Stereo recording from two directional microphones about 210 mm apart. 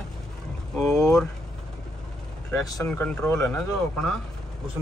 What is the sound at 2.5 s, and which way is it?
Speech, 15° left (ahead or behind).